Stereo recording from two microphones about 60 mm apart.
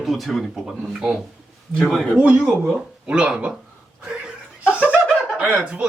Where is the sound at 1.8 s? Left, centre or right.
Centre.